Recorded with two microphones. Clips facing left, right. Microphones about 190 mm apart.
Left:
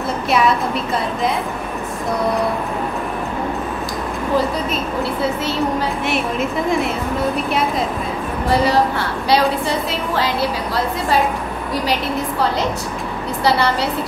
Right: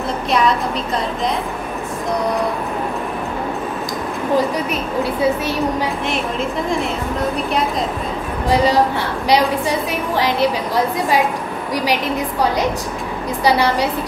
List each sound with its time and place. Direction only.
5.4 s a woman's voice: 15° right (ahead or behind)
9.3 s a woman's voice: 15° right (ahead or behind)
11.7 s a woman's voice: 15° right (ahead or behind)